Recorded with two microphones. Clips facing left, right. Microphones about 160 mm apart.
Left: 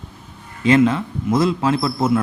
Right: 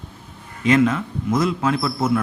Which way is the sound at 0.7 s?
30° left (ahead or behind).